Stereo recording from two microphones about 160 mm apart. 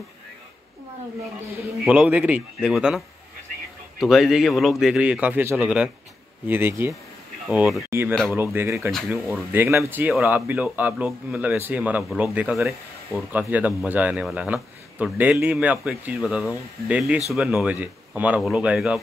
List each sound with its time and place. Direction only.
1.9 s speech: 10° right (ahead or behind)
4.0 s a man's voice: centre (ahead or behind)